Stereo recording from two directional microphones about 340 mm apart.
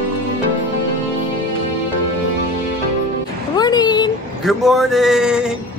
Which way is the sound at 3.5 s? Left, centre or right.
Centre.